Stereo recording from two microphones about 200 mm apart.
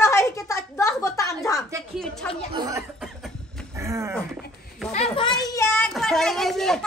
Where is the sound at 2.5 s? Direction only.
20° right (ahead or behind).